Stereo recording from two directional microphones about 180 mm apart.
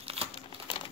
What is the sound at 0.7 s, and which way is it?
Crumpling, 30° left (ahead or behind).